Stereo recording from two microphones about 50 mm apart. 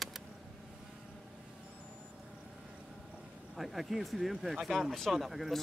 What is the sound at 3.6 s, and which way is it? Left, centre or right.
Speech, centre.